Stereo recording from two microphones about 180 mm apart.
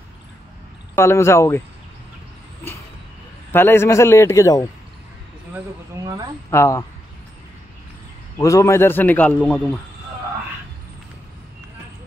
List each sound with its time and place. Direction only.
0.9 s a man's voice: 15° left (ahead or behind)
3.5 s a man's voice: 15° left (ahead or behind)
6.0 s speech: 20° right (ahead or behind)
6.5 s a man's voice: 15° left (ahead or behind)
8.4 s a man's voice: 20° left (ahead or behind)